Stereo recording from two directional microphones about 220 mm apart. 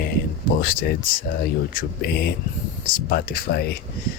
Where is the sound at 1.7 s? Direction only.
45° left (ahead or behind).